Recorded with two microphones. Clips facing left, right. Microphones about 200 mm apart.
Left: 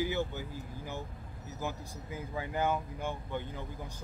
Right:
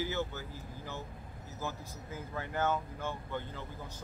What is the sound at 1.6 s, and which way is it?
Speech, 15° left (ahead or behind).